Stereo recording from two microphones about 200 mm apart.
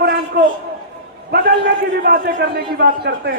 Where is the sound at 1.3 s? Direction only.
55° right (ahead or behind).